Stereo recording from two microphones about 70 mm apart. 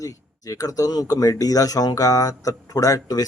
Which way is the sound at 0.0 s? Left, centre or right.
Left.